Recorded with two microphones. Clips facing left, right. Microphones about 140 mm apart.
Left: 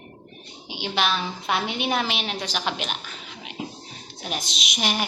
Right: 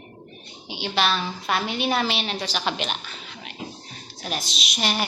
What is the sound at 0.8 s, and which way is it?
A woman's voice, 15° left (ahead or behind).